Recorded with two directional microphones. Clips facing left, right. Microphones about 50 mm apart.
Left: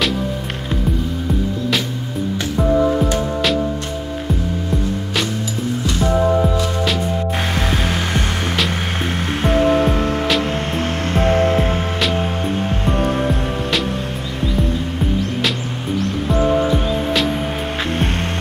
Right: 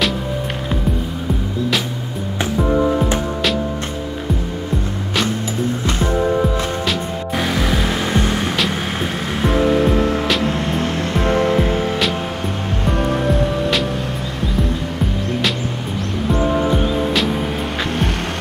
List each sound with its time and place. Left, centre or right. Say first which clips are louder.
7.5 s music: right 1 dB; left